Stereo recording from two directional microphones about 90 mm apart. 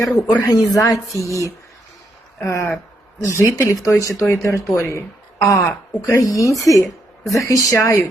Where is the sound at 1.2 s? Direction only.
35° left (ahead or behind).